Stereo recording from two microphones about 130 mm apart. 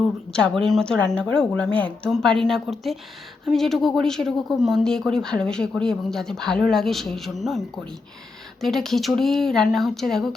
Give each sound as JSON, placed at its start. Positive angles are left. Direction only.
{"t": 0.6, "sound": "speech", "side_deg": 5}
{"t": 8.6, "sound": "speech", "side_deg": 0}